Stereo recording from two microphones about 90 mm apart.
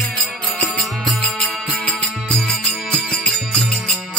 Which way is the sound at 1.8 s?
15° left (ahead or behind).